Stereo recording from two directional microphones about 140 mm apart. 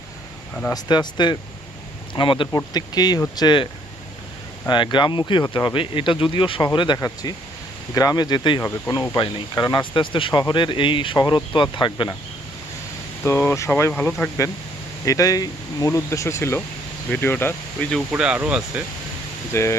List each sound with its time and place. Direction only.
0.7 s speech: 30° left (ahead or behind)
4.7 s speech: 35° left (ahead or behind)
13.2 s speech: 15° left (ahead or behind)
18.1 s speech: 10° right (ahead or behind)
19.5 s speech: 20° left (ahead or behind)